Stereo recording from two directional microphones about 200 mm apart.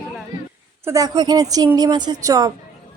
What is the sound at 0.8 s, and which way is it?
A woman's voice, 15° right (ahead or behind).